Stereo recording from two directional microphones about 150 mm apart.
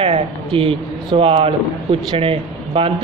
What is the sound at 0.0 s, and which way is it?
A man's voice, 40° right (ahead or behind).